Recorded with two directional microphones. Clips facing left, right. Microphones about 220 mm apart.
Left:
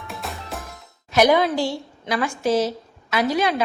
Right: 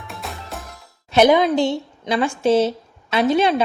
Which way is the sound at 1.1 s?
25° right (ahead or behind).